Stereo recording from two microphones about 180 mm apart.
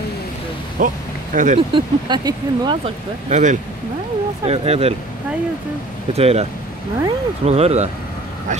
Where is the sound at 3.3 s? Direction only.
40° right (ahead or behind).